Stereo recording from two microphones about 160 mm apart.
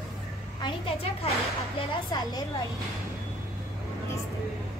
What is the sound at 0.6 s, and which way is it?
Speech, 35° left (ahead or behind).